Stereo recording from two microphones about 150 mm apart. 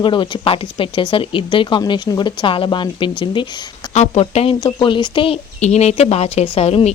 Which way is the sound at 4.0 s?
45° left (ahead or behind).